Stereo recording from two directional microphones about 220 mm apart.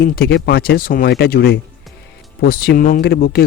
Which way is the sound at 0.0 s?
45° left (ahead or behind).